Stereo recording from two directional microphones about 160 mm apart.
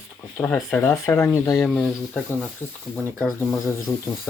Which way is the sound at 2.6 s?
15° left (ahead or behind).